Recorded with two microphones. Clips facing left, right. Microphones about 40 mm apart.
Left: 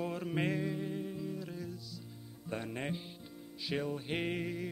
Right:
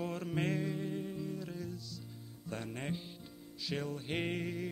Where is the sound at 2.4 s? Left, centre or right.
Centre.